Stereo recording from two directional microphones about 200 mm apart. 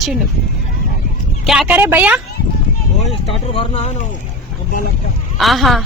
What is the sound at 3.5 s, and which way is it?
Speech, 30° left (ahead or behind).